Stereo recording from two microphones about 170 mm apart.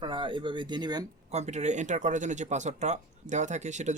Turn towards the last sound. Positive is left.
turn(degrees=-45)  # may be behind; listen again after turning